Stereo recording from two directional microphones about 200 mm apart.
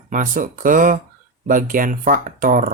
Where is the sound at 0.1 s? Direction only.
40° right (ahead or behind).